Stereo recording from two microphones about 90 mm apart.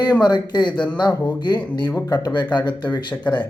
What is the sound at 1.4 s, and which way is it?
Speech, 55° left (ahead or behind).